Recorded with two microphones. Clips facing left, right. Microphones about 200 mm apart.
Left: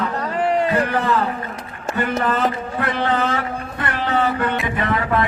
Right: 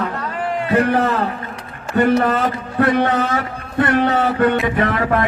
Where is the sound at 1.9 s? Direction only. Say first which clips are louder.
Right 6 dB; 50° right (ahead or behind).